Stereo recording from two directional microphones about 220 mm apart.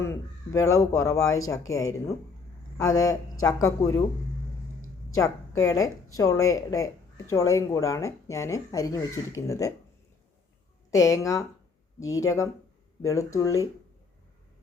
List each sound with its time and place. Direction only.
0.0 s speech: 15° left (ahead or behind)
5.1 s a woman's voice: 15° left (ahead or behind)
10.9 s speech: 15° left (ahead or behind)